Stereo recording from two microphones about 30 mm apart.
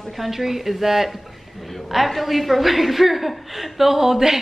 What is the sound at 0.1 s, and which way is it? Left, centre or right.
A woman's voice, centre.